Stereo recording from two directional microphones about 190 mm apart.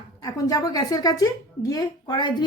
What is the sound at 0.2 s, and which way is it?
A woman's voice, 15° left (ahead or behind).